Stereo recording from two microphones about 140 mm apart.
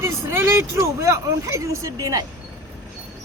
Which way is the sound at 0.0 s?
20° right (ahead or behind).